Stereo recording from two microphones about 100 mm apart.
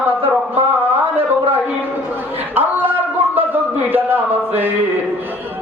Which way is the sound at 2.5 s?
20° right (ahead or behind).